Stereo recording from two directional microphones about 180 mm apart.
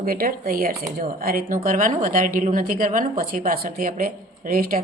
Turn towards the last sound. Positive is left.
turn(degrees=-50)  # may be behind; listen again after turning